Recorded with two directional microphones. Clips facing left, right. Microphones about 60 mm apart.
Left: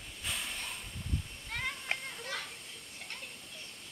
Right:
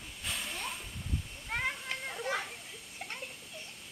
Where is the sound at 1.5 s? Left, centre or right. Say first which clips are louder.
Right 4 dB; centre.